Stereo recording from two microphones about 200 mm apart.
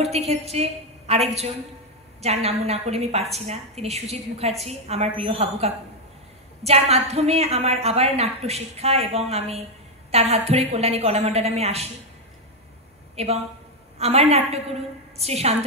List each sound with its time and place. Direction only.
0.3 s a woman's voice: 30° right (ahead or behind)
13.1 s a woman's voice: 30° right (ahead or behind)